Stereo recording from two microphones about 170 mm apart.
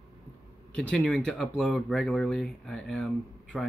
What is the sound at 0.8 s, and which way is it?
Speech, 5° left (ahead or behind).